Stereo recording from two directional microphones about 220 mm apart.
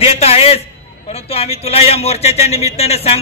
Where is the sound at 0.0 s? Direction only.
30° left (ahead or behind).